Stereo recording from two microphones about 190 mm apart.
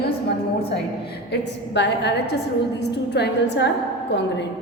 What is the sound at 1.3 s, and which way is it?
A woman's voice, 60° left (ahead or behind).